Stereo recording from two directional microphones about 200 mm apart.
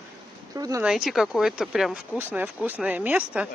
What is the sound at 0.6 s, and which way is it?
Speech, 15° right (ahead or behind).